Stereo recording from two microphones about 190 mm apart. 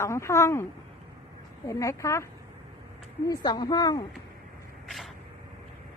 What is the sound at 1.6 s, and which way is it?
Speech, 15° left (ahead or behind).